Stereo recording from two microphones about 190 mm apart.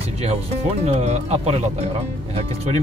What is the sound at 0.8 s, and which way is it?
Speech, 35° right (ahead or behind).